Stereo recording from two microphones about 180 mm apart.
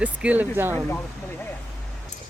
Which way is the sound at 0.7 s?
10° left (ahead or behind).